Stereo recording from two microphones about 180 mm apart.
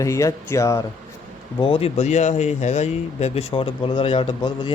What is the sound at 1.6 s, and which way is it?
A man's voice, 30° left (ahead or behind).